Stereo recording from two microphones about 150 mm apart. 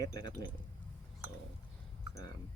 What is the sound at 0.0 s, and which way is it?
Speech, 25° left (ahead or behind).